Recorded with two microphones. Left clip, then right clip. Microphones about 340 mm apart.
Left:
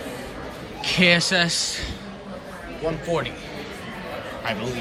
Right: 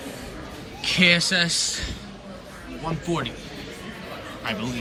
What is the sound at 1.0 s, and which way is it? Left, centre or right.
Speech, centre.